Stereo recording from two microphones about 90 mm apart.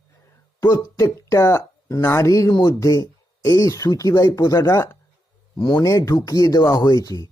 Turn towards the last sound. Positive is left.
turn(degrees=45)  # may be behind; listen again after turning